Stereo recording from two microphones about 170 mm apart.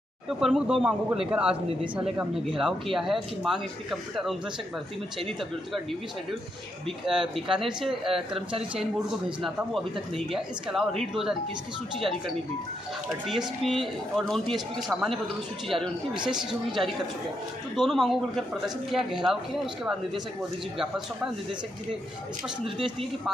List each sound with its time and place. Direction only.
0.3 s speech: 5° right (ahead or behind)
7.1 s speech: 5° right (ahead or behind)
8.4 s speech: 35° right (ahead or behind)
9.4 s speech: centre (ahead or behind)
13.3 s speech: centre (ahead or behind)
17.7 s speech: centre (ahead or behind)